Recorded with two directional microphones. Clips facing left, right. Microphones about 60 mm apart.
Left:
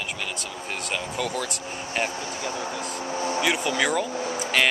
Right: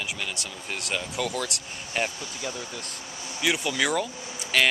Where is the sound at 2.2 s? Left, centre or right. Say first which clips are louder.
Left 5 dB; left.